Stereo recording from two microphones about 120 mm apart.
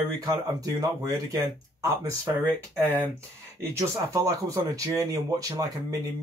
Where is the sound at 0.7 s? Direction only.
30° right (ahead or behind).